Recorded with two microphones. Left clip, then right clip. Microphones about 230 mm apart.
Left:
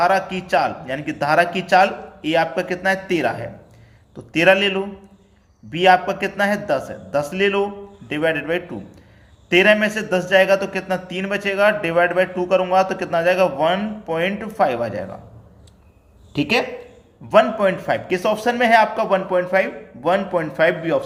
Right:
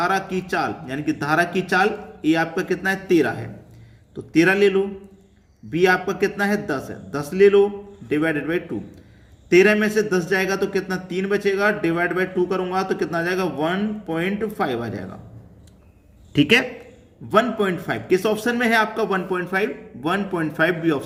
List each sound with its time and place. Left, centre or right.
0.0 s a man's voice: centre
16.3 s speech: right
17.2 s a man's voice: centre